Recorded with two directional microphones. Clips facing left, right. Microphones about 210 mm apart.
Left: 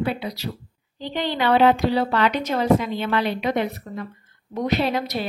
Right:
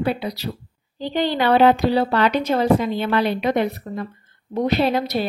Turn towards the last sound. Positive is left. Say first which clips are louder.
# right 3 dB
turn(degrees=-30)  # may be behind; listen again after turning